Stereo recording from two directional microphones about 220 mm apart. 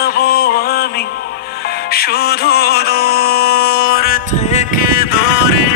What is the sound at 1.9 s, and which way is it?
Music, 45° left (ahead or behind).